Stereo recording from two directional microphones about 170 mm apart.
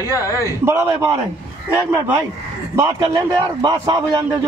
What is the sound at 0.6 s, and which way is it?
Speech, 15° right (ahead or behind).